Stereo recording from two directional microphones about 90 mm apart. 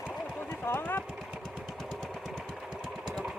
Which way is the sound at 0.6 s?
25° left (ahead or behind).